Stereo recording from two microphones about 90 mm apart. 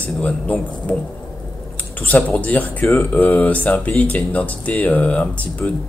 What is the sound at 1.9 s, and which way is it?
Speech, 20° left (ahead or behind).